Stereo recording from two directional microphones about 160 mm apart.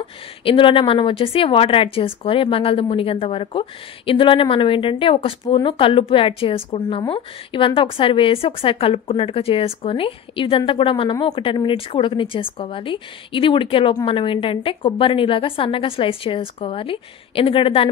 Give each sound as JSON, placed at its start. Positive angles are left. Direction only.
{"t": 0.0, "sound": "a woman's voice", "side_deg": 35}